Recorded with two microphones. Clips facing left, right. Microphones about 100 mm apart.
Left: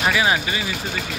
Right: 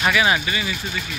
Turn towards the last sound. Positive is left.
turn(degrees=25)  # may be behind; listen again after turning